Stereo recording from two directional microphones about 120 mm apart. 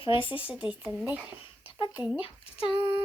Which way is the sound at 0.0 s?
45° left (ahead or behind).